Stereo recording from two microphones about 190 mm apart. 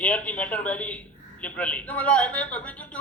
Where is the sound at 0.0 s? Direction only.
5° left (ahead or behind).